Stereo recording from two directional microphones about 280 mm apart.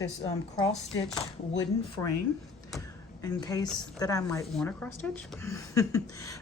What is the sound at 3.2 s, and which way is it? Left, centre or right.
A woman's voice, centre.